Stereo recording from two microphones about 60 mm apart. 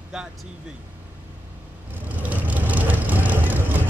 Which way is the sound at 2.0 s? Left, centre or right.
Right.